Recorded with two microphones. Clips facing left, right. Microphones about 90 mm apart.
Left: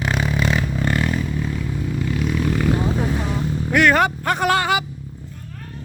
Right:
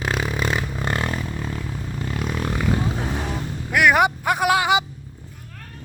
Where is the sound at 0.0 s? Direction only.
5° right (ahead or behind).